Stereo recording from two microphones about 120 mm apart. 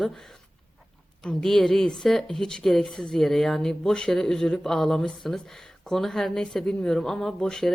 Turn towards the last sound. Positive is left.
turn(degrees=5)  # may be behind; listen again after turning